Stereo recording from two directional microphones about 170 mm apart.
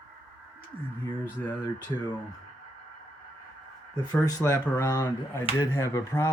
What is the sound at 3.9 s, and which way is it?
Speech, 20° left (ahead or behind).